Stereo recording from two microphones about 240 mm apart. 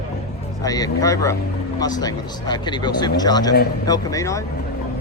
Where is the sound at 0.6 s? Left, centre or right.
Centre.